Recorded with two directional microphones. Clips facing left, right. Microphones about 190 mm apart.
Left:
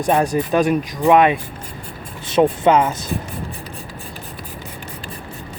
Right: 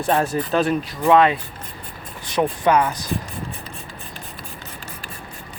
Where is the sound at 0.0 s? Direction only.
15° left (ahead or behind).